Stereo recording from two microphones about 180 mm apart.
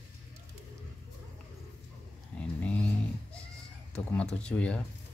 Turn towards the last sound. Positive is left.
turn(degrees=5)  # may be behind; listen again after turning